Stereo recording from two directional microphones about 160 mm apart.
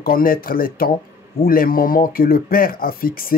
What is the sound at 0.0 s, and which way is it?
Speech, 65° left (ahead or behind).